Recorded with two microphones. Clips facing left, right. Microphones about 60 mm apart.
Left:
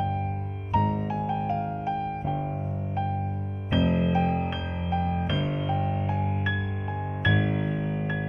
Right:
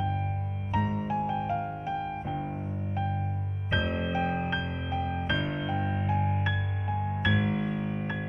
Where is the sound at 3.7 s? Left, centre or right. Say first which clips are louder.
Left 5 dB; centre.